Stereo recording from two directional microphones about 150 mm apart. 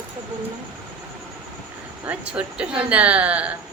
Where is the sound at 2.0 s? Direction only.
5° right (ahead or behind).